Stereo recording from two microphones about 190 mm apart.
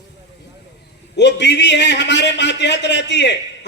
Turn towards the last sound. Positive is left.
turn(degrees=65)  # may be behind; listen again after turning